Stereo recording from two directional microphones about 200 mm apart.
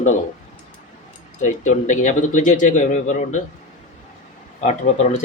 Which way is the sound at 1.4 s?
40° left (ahead or behind).